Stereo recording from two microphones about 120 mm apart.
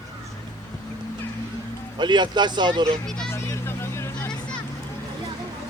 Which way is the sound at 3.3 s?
20° left (ahead or behind).